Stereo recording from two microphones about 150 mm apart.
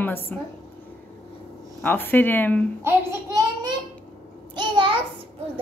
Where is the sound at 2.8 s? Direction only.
20° right (ahead or behind).